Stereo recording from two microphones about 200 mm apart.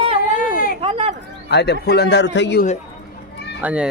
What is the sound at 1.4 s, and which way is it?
A man's voice, 55° left (ahead or behind).